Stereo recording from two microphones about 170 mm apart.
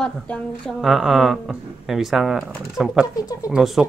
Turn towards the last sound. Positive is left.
turn(degrees=-5)  # may be behind; listen again after turning